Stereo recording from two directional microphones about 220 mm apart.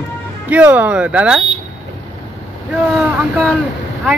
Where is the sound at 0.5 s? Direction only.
5° right (ahead or behind).